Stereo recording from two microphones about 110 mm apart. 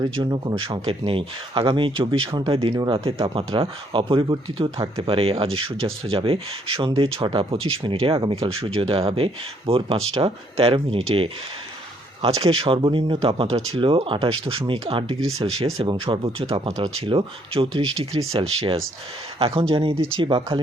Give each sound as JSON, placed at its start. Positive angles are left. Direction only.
{"t": 0.0, "sound": "speech", "side_deg": -35}
{"t": 12.4, "sound": "speech", "side_deg": -60}